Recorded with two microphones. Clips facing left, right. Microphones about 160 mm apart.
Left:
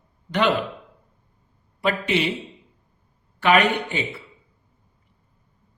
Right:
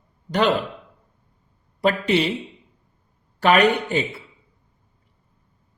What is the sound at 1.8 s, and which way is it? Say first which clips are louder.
Speech: right 3 dB; 40° right (ahead or behind).